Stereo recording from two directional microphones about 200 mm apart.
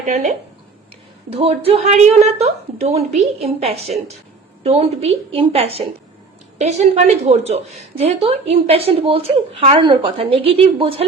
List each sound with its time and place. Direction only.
0.0 s a woman's voice: 35° right (ahead or behind)